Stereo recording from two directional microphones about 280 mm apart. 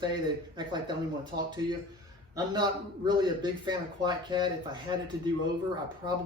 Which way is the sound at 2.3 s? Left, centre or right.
Centre.